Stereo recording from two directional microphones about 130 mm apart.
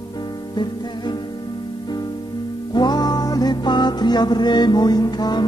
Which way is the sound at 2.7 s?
30° left (ahead or behind).